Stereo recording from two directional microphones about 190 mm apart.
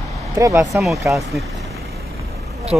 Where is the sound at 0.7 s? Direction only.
Centre (ahead or behind).